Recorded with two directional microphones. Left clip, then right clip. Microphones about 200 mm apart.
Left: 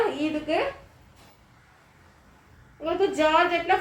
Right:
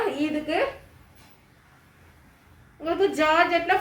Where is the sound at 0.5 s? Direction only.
25° right (ahead or behind).